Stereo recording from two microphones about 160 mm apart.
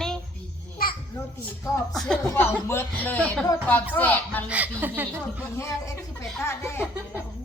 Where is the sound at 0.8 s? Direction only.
65° left (ahead or behind).